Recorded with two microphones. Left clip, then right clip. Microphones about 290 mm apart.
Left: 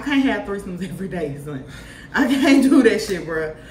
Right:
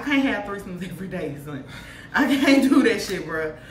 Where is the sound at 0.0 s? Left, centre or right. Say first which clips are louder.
Left 2 dB; centre.